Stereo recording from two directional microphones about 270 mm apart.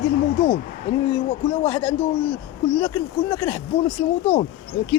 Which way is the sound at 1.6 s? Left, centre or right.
Centre.